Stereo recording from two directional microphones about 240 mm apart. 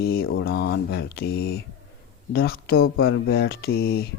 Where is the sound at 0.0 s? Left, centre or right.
Left.